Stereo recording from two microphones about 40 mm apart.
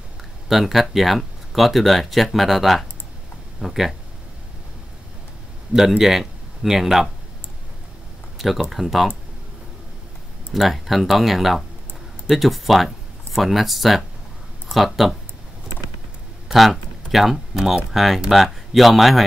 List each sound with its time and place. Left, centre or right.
0.5 s speech: centre
5.7 s speech: centre
8.4 s speech: centre
10.5 s speech: centre
16.5 s speech: centre